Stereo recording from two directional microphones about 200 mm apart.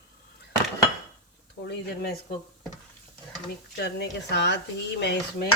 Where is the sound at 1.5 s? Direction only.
60° left (ahead or behind).